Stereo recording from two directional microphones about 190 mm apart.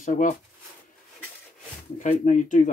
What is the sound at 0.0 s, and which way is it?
Speech, 45° left (ahead or behind).